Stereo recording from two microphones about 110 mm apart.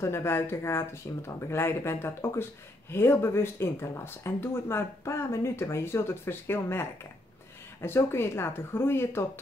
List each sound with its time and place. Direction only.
0.0 s speech: 20° left (ahead or behind)